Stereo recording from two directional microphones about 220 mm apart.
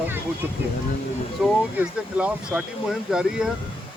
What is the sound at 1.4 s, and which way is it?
Speech, 5° right (ahead or behind).